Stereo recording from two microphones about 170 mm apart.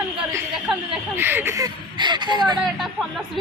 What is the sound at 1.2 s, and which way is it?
A woman's voice, 10° right (ahead or behind).